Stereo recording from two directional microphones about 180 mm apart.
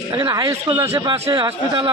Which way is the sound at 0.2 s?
20° right (ahead or behind).